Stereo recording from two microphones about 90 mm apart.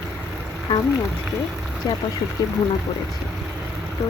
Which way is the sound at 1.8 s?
40° left (ahead or behind).